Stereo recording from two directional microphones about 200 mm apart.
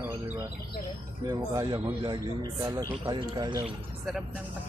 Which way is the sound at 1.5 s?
20° right (ahead or behind).